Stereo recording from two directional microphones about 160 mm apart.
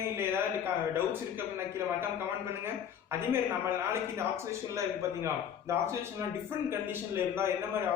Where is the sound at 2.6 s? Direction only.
15° right (ahead or behind).